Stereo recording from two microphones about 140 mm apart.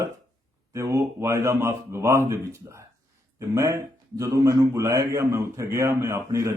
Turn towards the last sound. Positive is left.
turn(degrees=-20)  # may be behind; listen again after turning